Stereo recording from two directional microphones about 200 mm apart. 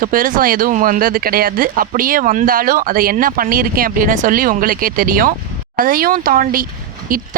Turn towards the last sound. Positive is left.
turn(degrees=-45)  # may be behind; listen again after turning